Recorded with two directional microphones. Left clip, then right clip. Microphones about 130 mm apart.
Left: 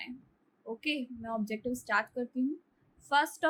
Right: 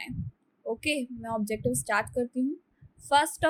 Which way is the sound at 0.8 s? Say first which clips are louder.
Right 2 dB; 60° right (ahead or behind).